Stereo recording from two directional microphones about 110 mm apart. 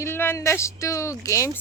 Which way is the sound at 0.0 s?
20° left (ahead or behind).